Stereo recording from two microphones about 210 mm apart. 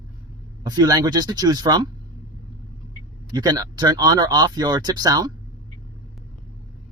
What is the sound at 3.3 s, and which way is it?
Speech, 20° right (ahead or behind).